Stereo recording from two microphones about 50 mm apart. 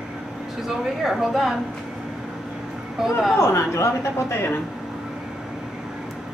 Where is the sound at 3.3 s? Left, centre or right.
Left.